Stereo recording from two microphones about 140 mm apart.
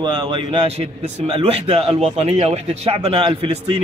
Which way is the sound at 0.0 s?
35° right (ahead or behind).